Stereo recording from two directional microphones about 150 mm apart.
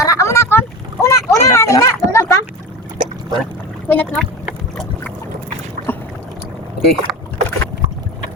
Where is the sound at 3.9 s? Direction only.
10° left (ahead or behind).